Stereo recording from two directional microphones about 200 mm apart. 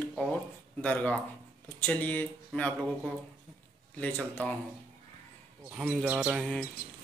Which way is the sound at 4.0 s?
5° left (ahead or behind).